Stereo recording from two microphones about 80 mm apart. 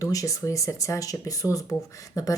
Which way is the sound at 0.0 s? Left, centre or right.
Left.